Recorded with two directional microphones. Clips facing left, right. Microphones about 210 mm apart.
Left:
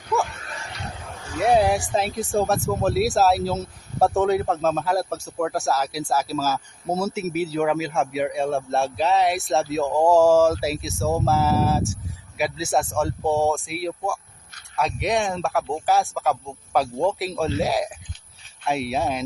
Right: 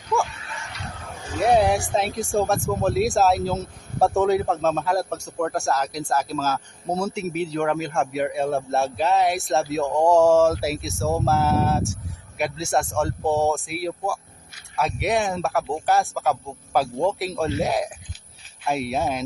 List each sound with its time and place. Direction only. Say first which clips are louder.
0.3 s dog: left 1 dB; 45° left (ahead or behind)
1.0 s a sound: right 1 dB; centre (ahead or behind)
1.9 s a man's voice: even; centre (ahead or behind)